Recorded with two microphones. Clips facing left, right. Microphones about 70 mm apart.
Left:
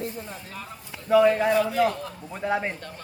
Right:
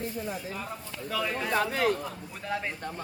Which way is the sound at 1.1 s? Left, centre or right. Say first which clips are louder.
Left 11 dB; left.